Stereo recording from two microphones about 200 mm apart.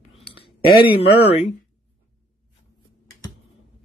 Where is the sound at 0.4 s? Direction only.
50° left (ahead or behind).